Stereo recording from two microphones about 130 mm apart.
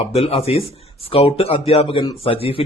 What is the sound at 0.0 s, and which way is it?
Speech, 50° left (ahead or behind).